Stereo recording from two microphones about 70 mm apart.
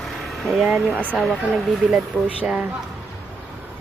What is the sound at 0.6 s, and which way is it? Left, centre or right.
Speech, right.